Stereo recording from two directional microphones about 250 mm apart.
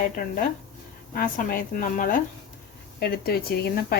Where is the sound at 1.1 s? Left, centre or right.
Left.